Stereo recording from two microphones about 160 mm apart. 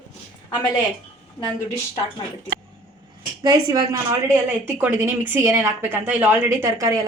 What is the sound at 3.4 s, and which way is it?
A woman's voice, 25° right (ahead or behind).